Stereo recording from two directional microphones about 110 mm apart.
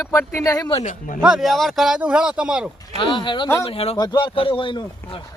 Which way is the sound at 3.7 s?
60° left (ahead or behind).